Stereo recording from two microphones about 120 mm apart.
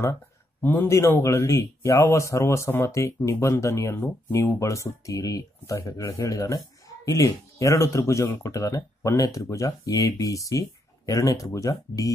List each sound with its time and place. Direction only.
0.6 s speech: 15° left (ahead or behind)